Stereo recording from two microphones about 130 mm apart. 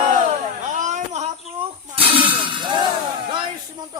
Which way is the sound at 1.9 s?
45° right (ahead or behind).